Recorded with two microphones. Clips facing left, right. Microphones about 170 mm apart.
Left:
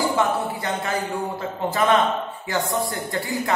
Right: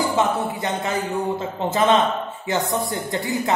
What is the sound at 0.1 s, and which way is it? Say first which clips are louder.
A man's voice: right 1 dB; 20° right (ahead or behind).